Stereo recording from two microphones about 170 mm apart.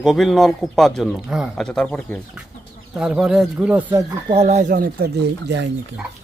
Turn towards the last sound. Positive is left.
turn(degrees=-80)